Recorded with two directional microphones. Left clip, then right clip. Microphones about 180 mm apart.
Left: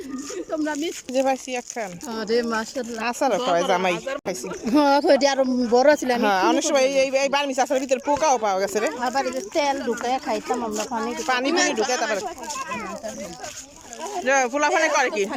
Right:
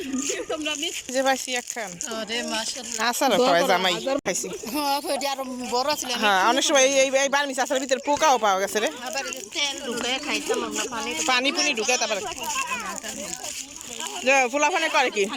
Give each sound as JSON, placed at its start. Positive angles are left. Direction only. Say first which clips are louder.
{"t": 1.1, "sound": "speech", "louder": "left 1 dB", "side_deg": 10}
{"t": 2.1, "sound": "speech", "louder": "left 5 dB", "side_deg": 60}
{"t": 3.0, "sound": "speech", "louder": "right 2 dB", "side_deg": 10}
{"t": 3.9, "sound": "speech", "louder": "right 3 dB", "side_deg": -30}
{"t": 4.7, "sound": "speech", "louder": "left 9 dB", "side_deg": 65}
{"t": 5.7, "sound": "speech", "louder": "left 8 dB", "side_deg": 75}
{"t": 6.1, "sound": "speech", "louder": "even", "side_deg": 10}
{"t": 9.0, "sound": "speech", "louder": "left 7 dB", "side_deg": 65}
{"t": 11.0, "sound": "speech", "louder": "right 2 dB", "side_deg": 5}
{"t": 14.3, "sound": "speech", "louder": "even", "side_deg": -5}